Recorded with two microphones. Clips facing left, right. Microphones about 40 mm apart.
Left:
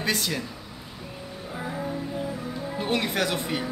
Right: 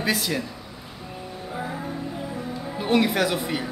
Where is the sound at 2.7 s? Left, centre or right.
Centre.